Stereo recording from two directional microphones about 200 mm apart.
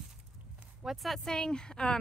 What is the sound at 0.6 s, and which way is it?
Speech, centre (ahead or behind).